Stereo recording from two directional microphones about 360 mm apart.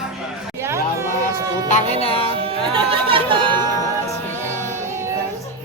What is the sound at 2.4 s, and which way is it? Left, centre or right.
Music, centre.